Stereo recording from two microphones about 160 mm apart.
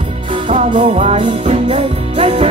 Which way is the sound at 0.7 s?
40° right (ahead or behind).